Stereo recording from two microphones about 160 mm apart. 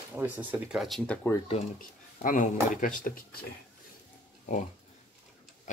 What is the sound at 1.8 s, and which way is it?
Speech, 55° left (ahead or behind).